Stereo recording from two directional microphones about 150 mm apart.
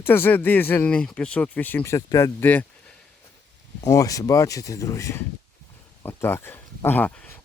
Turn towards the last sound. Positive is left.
turn(degrees=10)  # may be behind; listen again after turning